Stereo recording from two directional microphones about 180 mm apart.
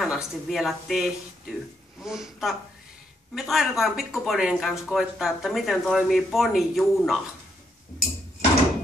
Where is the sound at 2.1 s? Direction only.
Centre (ahead or behind).